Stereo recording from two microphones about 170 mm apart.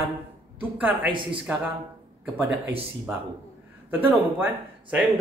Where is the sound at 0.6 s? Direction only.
10° right (ahead or behind).